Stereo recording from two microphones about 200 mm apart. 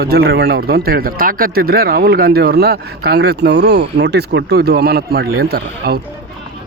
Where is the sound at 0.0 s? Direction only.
50° right (ahead or behind).